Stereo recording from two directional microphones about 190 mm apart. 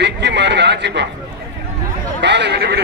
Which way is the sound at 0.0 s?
65° right (ahead or behind).